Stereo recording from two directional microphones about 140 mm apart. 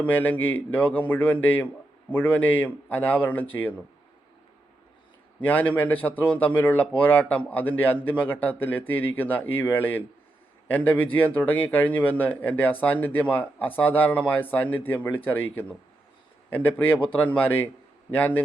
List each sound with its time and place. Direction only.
0.0 s a man's voice: 10° left (ahead or behind)
5.4 s a man's voice: 15° left (ahead or behind)
16.5 s a man's voice: 15° left (ahead or behind)